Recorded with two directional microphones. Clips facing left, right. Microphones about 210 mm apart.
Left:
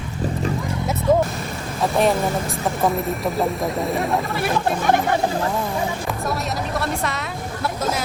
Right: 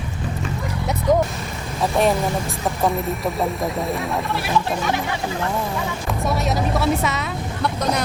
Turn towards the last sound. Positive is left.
turn(degrees=5)  # may be behind; listen again after turning